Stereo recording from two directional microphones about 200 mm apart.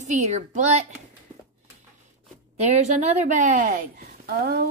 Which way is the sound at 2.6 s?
35° right (ahead or behind).